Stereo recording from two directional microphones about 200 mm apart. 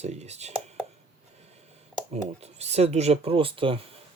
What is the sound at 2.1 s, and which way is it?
Speech, 30° right (ahead or behind).